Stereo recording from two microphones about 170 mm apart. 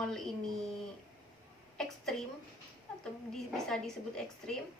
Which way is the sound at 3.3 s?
5° left (ahead or behind).